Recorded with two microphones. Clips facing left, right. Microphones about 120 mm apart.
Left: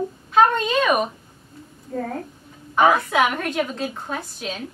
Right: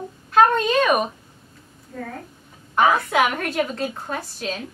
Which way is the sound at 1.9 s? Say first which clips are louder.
Left 6 dB; 55° left (ahead or behind).